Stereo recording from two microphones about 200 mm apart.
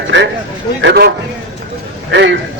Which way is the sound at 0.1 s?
65° right (ahead or behind).